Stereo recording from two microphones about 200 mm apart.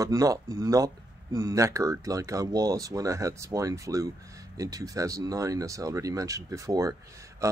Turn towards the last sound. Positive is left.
turn(degrees=-15)  # may be behind; listen again after turning